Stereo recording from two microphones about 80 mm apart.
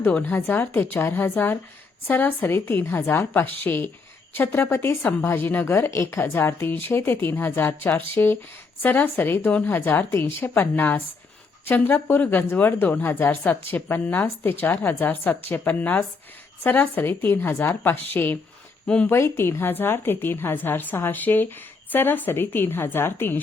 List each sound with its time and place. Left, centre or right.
0.1 s a woman's voice: centre
18.9 s speech: centre
19.1 s a woman's voice: left